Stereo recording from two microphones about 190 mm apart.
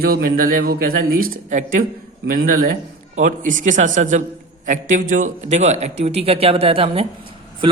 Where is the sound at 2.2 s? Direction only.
60° right (ahead or behind).